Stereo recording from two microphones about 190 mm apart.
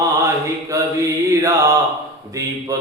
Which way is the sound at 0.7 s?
15° right (ahead or behind).